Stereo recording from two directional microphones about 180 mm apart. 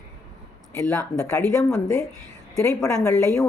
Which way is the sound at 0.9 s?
15° left (ahead or behind).